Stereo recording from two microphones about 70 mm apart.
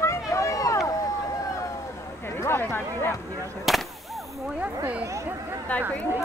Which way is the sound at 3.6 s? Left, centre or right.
Centre.